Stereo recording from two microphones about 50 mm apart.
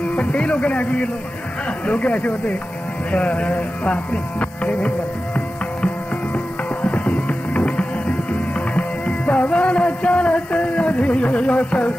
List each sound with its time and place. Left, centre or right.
0.1 s speech: left
3.1 s music: left